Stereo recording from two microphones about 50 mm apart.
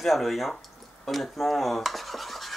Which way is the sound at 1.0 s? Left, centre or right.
Centre.